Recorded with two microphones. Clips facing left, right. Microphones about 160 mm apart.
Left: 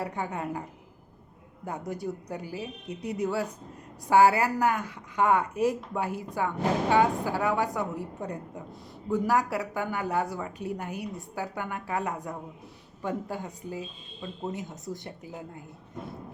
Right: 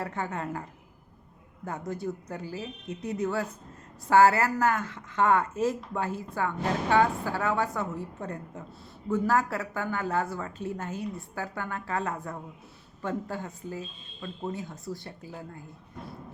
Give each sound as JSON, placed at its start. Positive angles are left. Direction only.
{"t": 0.0, "sound": "speech", "side_deg": 15}
{"t": 1.9, "sound": "speech", "side_deg": 15}